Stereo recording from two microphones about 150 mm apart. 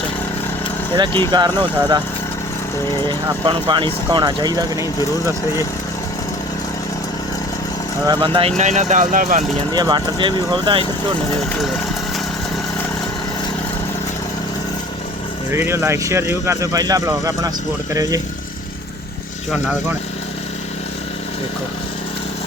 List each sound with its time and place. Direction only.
0.9 s speech: 30° right (ahead or behind)
3.1 s speech: 35° right (ahead or behind)
8.0 s speech: 30° right (ahead or behind); by 9.4 s 65° right (ahead or behind)
9.7 s speech: 30° right (ahead or behind)
15.5 s speech: 15° right (ahead or behind)
19.5 s speech: 5° right (ahead or behind)